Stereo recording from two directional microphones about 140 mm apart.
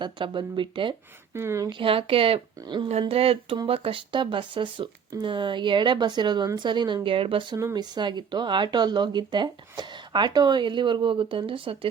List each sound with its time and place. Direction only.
0.0 s speech: 35° right (ahead or behind)
1.3 s speech: 20° right (ahead or behind)
1.8 s speech: 40° right (ahead or behind)
7.5 s speech: 25° right (ahead or behind)